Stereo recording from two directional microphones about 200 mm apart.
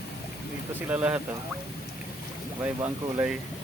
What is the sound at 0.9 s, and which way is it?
Speech, 10° right (ahead or behind).